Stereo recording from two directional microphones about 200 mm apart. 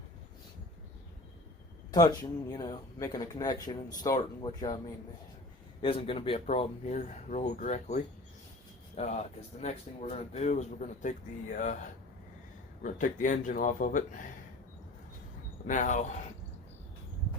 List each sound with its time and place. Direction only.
1.9 s speech: 20° left (ahead or behind)
5.8 s speech: 25° left (ahead or behind)
12.8 s speech: 40° left (ahead or behind)
15.6 s speech: 40° left (ahead or behind)